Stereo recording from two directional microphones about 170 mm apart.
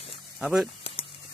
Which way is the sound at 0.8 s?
35° left (ahead or behind).